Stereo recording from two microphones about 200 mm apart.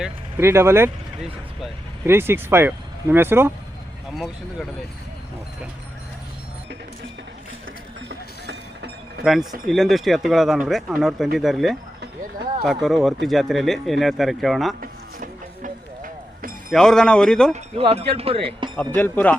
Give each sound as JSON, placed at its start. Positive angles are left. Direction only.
{"t": 0.3, "sound": "speech", "side_deg": -15}
{"t": 2.0, "sound": "speech", "side_deg": -10}
{"t": 8.4, "sound": "a sound", "side_deg": -60}
{"t": 9.2, "sound": "speech", "side_deg": 0}
{"t": 14.8, "sound": "music", "side_deg": -40}
{"t": 16.7, "sound": "speech", "side_deg": 0}
{"t": 17.5, "sound": "speech", "side_deg": -30}
{"t": 18.9, "sound": "a man's voice", "side_deg": 10}